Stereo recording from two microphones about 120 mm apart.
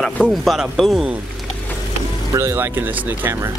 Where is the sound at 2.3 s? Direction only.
20° right (ahead or behind).